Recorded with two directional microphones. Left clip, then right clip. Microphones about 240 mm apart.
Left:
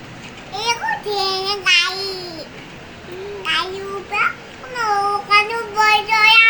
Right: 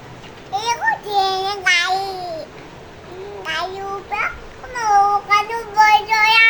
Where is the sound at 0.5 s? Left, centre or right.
Right.